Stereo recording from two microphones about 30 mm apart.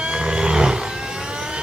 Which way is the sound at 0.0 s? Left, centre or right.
Right.